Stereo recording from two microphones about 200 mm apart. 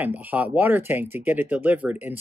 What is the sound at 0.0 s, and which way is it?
Speech, 10° right (ahead or behind).